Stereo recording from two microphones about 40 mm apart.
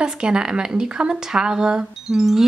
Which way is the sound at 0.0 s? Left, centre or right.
Right.